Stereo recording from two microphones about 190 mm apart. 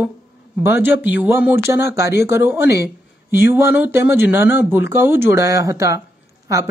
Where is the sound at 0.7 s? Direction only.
10° right (ahead or behind).